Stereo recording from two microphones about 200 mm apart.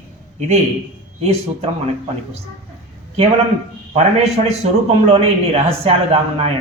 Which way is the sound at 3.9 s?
30° right (ahead or behind).